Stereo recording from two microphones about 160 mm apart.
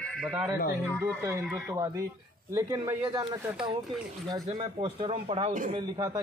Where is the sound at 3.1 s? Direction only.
30° right (ahead or behind).